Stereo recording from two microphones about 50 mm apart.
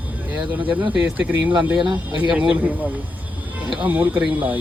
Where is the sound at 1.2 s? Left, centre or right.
Right.